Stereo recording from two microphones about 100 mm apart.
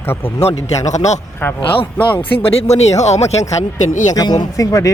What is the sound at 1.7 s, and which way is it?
Speech, 55° left (ahead or behind).